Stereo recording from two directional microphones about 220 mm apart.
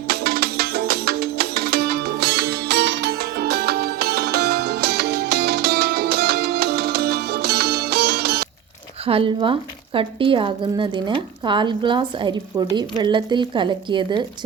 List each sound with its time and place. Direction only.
0.1 s music: 45° right (ahead or behind)
9.0 s a woman's voice: 25° right (ahead or behind)